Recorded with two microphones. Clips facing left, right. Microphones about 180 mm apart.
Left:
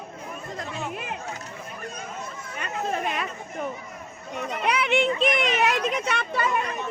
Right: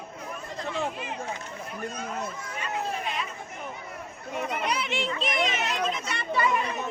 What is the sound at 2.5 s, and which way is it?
Chatter, 60° left (ahead or behind).